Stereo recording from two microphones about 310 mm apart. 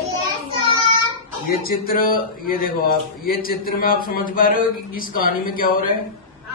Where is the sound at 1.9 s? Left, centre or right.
Left.